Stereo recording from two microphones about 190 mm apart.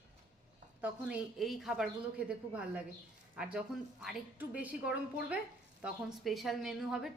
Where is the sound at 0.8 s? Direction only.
5° right (ahead or behind).